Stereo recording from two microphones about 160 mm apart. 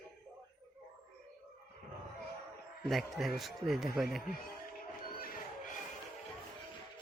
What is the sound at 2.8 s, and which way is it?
Speech, centre (ahead or behind).